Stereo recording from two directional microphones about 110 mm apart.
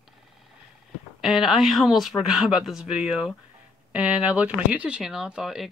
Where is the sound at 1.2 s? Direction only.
Centre (ahead or behind).